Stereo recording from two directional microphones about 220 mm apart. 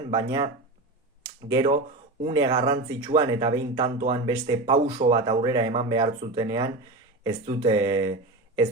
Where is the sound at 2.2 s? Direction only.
20° right (ahead or behind).